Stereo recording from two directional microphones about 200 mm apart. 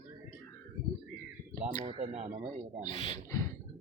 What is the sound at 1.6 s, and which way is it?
Speech, 30° right (ahead or behind).